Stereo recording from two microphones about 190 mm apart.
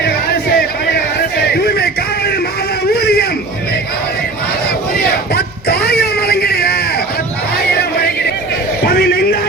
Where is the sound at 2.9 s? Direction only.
55° left (ahead or behind).